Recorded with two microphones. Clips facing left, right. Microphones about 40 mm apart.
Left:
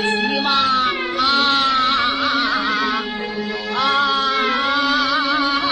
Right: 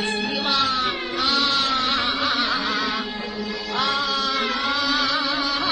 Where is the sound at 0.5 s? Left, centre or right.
Centre.